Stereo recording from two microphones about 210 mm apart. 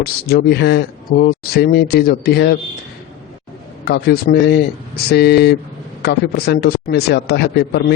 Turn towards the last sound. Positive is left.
turn(degrees=50)  # may be behind; listen again after turning